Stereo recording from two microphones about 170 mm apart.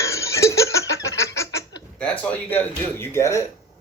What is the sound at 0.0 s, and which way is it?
Chicken, 15° left (ahead or behind).